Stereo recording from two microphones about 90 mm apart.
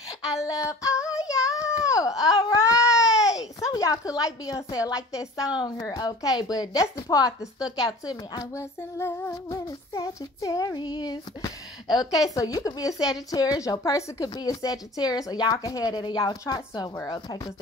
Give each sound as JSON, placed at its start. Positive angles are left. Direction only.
{"t": 0.4, "sound": "a sound", "side_deg": 35}
{"t": 1.1, "sound": "baby cry", "side_deg": 40}
{"t": 3.1, "sound": "baby cry", "side_deg": -5}
{"t": 3.6, "sound": "a woman's voice", "side_deg": 40}
{"t": 5.6, "sound": "a woman's voice", "side_deg": 50}
{"t": 9.3, "sound": "a woman's voice", "side_deg": 40}
{"t": 10.8, "sound": "a woman's voice", "side_deg": 50}